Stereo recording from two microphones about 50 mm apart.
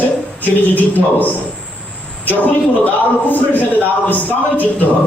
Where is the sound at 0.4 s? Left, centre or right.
Left.